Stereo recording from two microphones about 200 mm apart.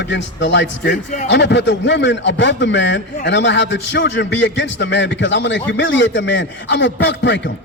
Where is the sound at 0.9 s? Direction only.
40° left (ahead or behind).